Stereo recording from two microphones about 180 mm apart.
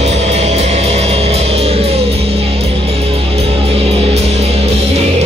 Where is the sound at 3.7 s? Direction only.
35° right (ahead or behind).